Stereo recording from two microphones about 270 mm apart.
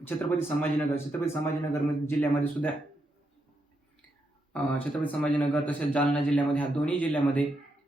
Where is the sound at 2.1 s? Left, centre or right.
Centre.